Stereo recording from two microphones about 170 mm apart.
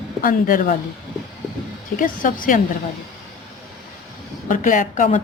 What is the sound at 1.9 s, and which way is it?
Speech, 55° left (ahead or behind).